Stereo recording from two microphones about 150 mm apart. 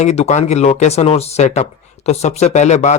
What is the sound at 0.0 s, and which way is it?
Speech, 45° left (ahead or behind).